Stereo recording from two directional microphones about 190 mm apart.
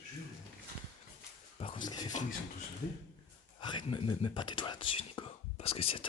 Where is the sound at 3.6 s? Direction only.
25° left (ahead or behind).